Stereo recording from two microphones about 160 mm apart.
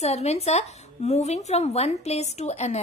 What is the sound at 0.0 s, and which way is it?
A woman's voice, 40° left (ahead or behind).